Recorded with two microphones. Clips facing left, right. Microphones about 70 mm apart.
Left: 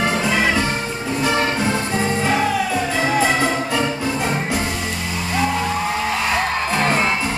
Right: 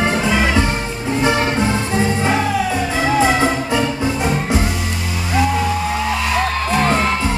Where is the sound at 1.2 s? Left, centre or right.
Right.